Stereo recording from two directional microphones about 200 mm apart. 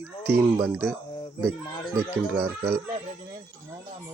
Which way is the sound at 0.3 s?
10° right (ahead or behind).